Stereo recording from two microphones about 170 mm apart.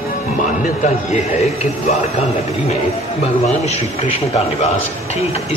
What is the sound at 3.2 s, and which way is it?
Speech, 40° left (ahead or behind).